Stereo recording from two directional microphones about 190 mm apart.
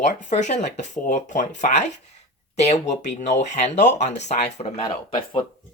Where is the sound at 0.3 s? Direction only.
40° left (ahead or behind).